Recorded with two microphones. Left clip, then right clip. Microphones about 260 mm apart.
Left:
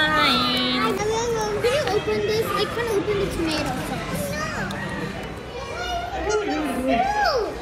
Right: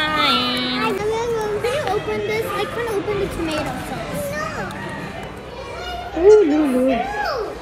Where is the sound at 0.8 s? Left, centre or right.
Right.